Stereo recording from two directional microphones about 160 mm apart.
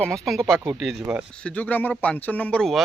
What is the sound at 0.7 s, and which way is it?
Speech, 10° right (ahead or behind).